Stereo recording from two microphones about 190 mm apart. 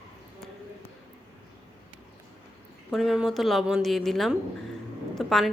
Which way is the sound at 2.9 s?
Centre (ahead or behind).